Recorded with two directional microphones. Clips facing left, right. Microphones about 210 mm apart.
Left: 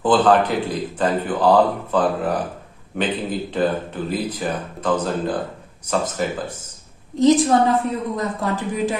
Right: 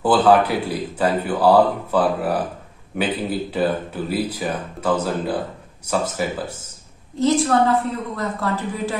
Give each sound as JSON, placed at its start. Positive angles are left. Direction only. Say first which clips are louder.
{"t": 0.0, "sound": "speech", "louder": "even", "side_deg": -10}
{"t": 7.2, "sound": "speech", "louder": "left 3 dB", "side_deg": 20}